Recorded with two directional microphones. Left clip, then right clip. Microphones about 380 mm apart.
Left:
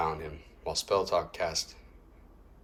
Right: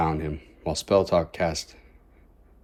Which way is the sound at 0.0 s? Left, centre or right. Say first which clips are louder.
Right 6 dB; centre.